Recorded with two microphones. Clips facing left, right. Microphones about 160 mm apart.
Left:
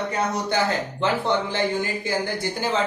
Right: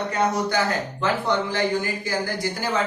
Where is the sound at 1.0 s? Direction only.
25° left (ahead or behind).